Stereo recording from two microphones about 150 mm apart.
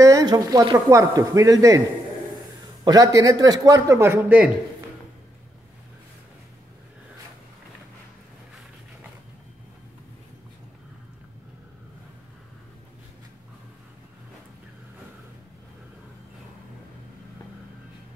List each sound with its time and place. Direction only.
0.0 s speech: 25° right (ahead or behind)
2.8 s speech: 25° right (ahead or behind)